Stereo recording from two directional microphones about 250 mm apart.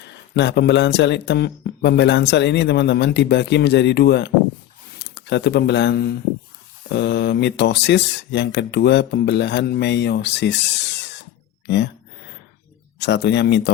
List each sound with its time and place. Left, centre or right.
0.0 s speech: left
13.0 s speech: left